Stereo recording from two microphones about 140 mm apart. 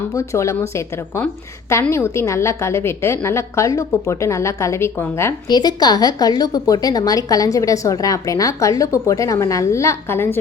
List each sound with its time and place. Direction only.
0.1 s a woman's voice: 20° left (ahead or behind)
1.8 s a woman's voice: 20° left (ahead or behind)
5.5 s a woman's voice: 30° left (ahead or behind)